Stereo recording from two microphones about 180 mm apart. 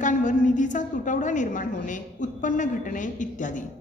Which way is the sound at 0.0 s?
45° left (ahead or behind).